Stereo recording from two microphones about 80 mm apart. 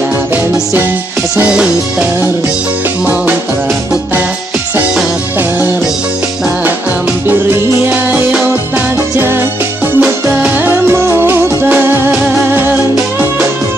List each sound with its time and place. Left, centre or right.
1.5 s music: centre
7.9 s music: right
9.9 s music: right